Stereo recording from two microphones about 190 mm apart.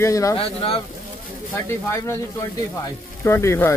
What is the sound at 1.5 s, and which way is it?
Speech, 15° left (ahead or behind).